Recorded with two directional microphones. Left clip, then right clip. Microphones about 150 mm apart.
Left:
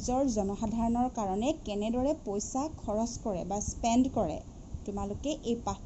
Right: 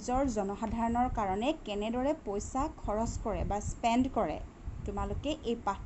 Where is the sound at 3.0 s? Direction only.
25° right (ahead or behind).